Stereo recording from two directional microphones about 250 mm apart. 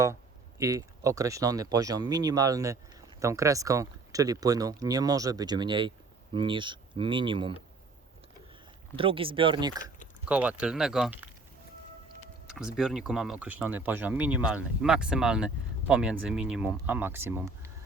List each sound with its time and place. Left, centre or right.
0.6 s speech: centre
9.0 s speech: right
10.2 s speech: centre
12.5 s speech: centre